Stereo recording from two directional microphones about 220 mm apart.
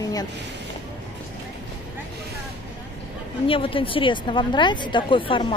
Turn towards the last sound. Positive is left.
turn(degrees=20)  # may be behind; listen again after turning